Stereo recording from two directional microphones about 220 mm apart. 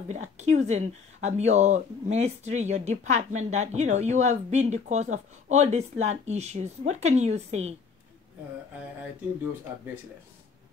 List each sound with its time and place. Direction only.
0.1 s speech: 30° right (ahead or behind)